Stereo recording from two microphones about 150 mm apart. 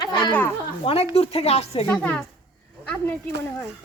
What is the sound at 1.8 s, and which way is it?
Speech, 10° left (ahead or behind).